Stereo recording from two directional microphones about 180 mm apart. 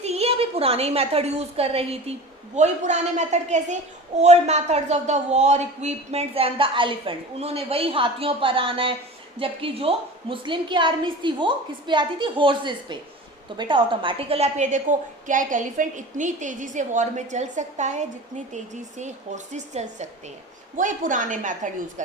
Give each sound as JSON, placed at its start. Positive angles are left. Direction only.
{"t": 0.0, "sound": "a woman's voice", "side_deg": -35}